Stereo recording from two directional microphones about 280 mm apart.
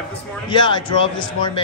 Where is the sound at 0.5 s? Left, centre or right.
Centre.